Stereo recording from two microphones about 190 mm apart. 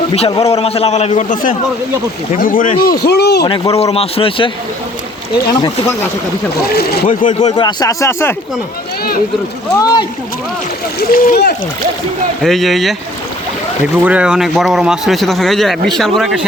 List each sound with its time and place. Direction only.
0.1 s a man's voice: 30° left (ahead or behind); by 2.7 s 45° left (ahead or behind)
3.0 s speech: 60° left (ahead or behind)
3.4 s a man's voice: 25° left (ahead or behind)
6.7 s speech: 50° left (ahead or behind)
7.5 s speech: 20° left (ahead or behind)
9.7 s a man's voice: 20° left (ahead or behind)
11.1 s speech: 50° left (ahead or behind)
12.4 s a man's voice: centre (ahead or behind)